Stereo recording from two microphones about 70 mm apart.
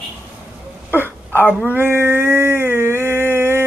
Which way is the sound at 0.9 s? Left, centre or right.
Right.